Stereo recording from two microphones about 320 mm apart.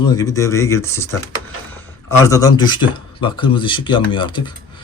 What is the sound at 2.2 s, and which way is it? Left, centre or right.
Speech, centre.